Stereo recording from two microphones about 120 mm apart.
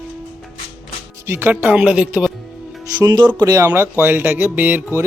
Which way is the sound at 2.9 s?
35° right (ahead or behind).